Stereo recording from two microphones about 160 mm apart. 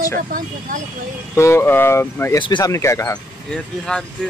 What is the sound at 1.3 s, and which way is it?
Speech, 15° left (ahead or behind).